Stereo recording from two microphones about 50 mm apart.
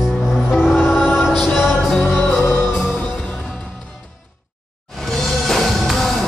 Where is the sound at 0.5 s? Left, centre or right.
Centre.